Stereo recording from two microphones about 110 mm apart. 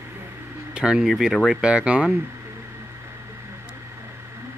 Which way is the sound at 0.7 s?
5° right (ahead or behind).